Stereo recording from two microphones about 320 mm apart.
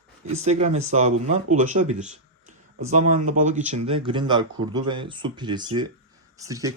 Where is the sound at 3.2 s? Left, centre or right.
Right.